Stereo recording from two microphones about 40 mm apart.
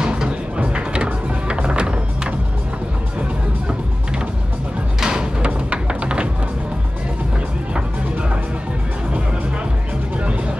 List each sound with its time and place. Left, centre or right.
0.0 s music: right
5.0 s a sound: centre
5.5 s music: right